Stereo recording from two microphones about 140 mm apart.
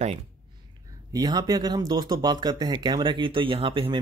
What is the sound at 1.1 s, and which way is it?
Speech, 30° right (ahead or behind).